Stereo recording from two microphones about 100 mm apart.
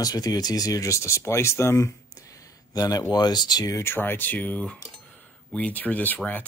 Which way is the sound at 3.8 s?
20° left (ahead or behind).